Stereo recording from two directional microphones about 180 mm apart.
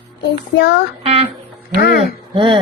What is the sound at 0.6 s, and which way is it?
Child singing, 75° left (ahead or behind).